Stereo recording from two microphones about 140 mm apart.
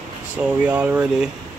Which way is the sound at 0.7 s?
10° right (ahead or behind).